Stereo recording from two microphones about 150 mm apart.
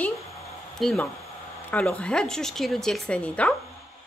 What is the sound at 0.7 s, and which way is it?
A woman's voice, centre (ahead or behind).